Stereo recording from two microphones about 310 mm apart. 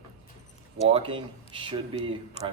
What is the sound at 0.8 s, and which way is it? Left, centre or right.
Speech, centre.